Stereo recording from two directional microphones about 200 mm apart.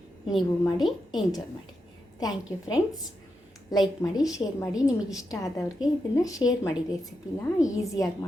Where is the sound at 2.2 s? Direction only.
20° left (ahead or behind).